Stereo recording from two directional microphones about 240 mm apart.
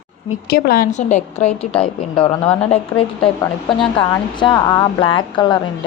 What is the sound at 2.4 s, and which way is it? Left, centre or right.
Speech, centre.